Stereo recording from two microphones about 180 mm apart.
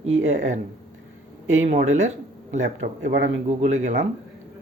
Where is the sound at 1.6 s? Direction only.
40° right (ahead or behind).